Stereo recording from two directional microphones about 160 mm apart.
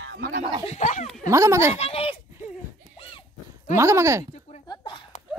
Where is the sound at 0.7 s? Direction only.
50° left (ahead or behind).